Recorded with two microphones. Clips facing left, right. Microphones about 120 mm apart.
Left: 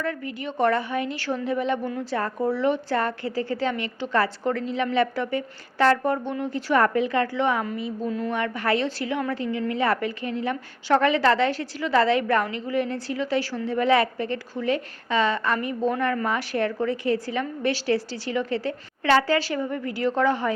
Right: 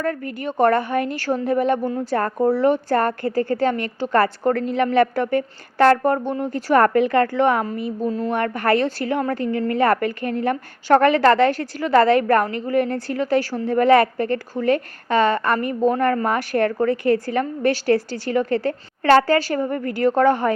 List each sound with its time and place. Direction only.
0.0 s a woman's voice: 45° right (ahead or behind)
8.0 s a woman's voice: 30° right (ahead or behind)
8.3 s a woman's voice: 50° right (ahead or behind)